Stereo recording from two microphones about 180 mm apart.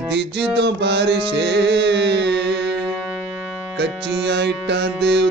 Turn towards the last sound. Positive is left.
turn(degrees=-70)  # may be behind; listen again after turning